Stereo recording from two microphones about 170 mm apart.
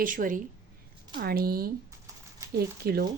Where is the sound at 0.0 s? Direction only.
55° right (ahead or behind).